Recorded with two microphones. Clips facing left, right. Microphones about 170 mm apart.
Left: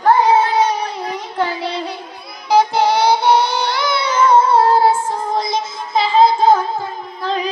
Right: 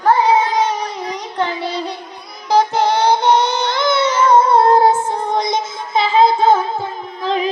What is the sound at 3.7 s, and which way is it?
Child singing, 10° left (ahead or behind).